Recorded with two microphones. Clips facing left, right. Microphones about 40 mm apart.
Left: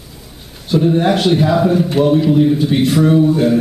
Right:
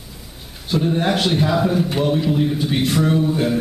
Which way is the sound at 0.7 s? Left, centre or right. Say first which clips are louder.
Left 6 dB; centre.